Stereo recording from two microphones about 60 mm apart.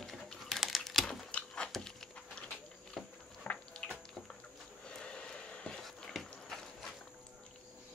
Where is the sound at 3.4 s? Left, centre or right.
Centre.